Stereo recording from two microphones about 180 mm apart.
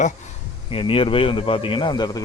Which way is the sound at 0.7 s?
30° left (ahead or behind).